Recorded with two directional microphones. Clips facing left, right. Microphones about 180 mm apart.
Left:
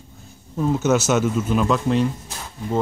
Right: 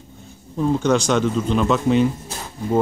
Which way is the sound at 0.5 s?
5° left (ahead or behind).